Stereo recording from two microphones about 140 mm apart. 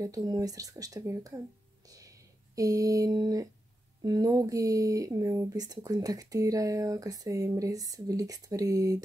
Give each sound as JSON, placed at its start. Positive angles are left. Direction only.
{"t": 0.0, "sound": "speech", "side_deg": -25}
{"t": 1.9, "sound": "a sound", "side_deg": -25}
{"t": 4.0, "sound": "speech", "side_deg": -25}